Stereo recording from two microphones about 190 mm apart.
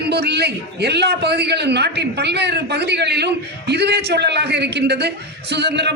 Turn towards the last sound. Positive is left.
turn(degrees=-60)  # may be behind; listen again after turning